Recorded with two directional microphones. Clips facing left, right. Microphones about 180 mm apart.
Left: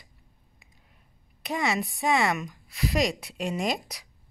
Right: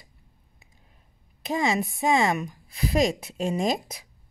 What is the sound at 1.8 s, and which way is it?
Speech, 45° right (ahead or behind).